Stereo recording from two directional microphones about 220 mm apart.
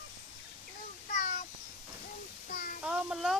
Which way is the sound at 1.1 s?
30° left (ahead or behind).